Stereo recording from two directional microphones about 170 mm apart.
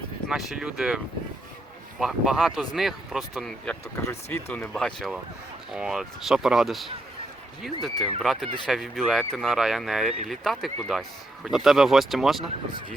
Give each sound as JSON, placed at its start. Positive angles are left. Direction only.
{"t": 0.3, "sound": "speech", "side_deg": -5}
{"t": 3.9, "sound": "speech", "side_deg": 15}